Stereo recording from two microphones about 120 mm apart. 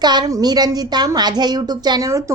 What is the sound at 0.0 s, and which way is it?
A woman's voice, 35° right (ahead or behind).